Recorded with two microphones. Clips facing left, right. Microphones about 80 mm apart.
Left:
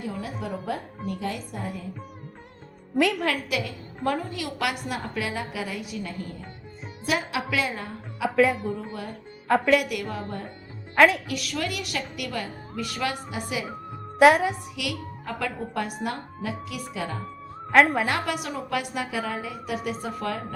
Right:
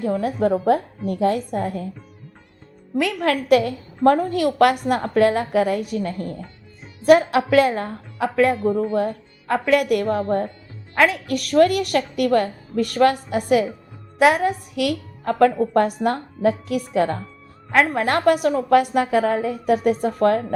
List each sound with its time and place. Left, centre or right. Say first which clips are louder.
0.0 s a woman's voice: right 12 dB; right
2.9 s a woman's voice: right 3 dB; centre
3.5 s a woman's voice: right 13 dB; right
8.3 s a woman's voice: right 3 dB; centre
8.5 s a woman's voice: right 12 dB; right
9.5 s a woman's voice: right 2 dB; centre
9.9 s a woman's voice: right 12 dB; right
10.9 s a woman's voice: even; centre
11.3 s a woman's voice: right 14 dB; right
14.2 s a woman's voice: right 1 dB; centre
14.8 s a woman's voice: right 9 dB; right
17.7 s speech: even; centre
18.0 s a woman's voice: right 10 dB; right